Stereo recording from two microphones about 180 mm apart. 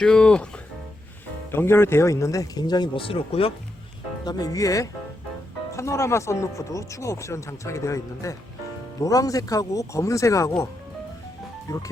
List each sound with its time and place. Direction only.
0.0 s speech: 5° left (ahead or behind)
1.5 s speech: 15° left (ahead or behind); by 3.5 s 30° left (ahead or behind)
4.3 s speech: 20° left (ahead or behind)
11.7 s speech: 20° left (ahead or behind)